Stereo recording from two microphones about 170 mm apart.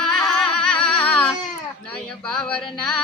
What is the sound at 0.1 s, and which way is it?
Music, 5° left (ahead or behind).